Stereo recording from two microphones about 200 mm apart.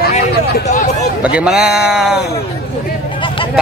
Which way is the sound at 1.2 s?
5° right (ahead or behind).